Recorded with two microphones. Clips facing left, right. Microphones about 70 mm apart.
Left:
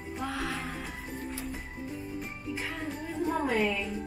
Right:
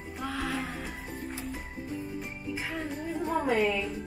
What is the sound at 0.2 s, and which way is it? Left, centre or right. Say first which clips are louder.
Music: right 2 dB; centre.